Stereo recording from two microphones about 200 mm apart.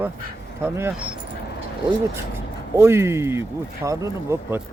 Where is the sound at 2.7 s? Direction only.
15° right (ahead or behind).